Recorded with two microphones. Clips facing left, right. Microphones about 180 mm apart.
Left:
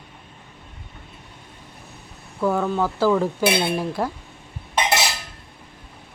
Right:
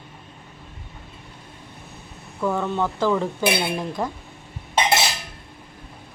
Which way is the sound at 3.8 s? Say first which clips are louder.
Left 2 dB; 5° left (ahead or behind).